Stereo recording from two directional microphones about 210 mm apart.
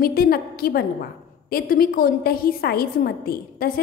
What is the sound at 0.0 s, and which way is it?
A woman's voice, 45° left (ahead or behind).